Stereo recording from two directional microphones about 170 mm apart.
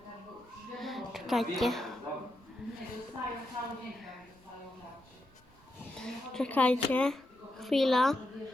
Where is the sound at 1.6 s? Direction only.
Centre (ahead or behind).